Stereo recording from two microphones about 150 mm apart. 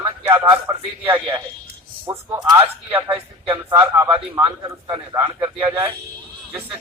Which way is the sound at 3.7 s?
20° right (ahead or behind).